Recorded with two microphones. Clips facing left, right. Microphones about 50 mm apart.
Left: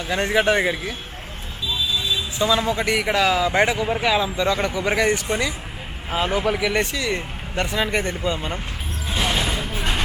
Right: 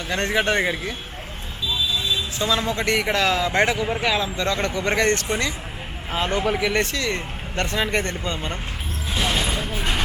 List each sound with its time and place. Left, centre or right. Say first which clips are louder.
0.1 s speech: left 2 dB; centre
2.0 s speech: left 5 dB; centre
9.0 s a sound: left 1 dB; centre
9.6 s vehicle: even; centre